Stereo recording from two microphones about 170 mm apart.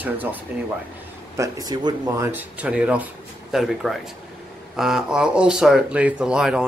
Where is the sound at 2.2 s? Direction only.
10° right (ahead or behind).